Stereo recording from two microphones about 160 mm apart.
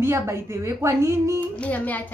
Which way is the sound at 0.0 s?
15° right (ahead or behind).